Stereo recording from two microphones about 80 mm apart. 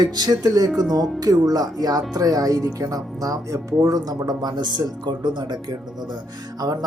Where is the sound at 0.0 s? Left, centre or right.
Right.